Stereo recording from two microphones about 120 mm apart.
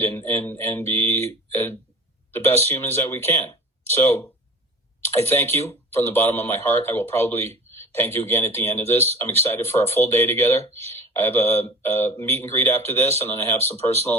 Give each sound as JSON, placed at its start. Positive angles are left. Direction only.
{"t": 0.0, "sound": "speech", "side_deg": 20}